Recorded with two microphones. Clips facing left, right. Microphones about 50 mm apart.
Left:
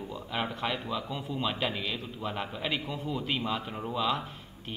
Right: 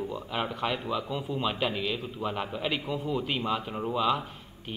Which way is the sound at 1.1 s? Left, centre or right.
Centre.